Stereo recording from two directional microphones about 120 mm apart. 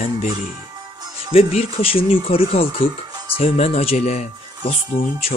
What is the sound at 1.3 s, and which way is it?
Speech, 55° left (ahead or behind).